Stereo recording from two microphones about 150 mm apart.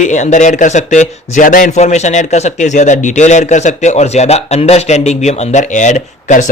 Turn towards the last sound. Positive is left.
turn(degrees=55)  # may be behind; listen again after turning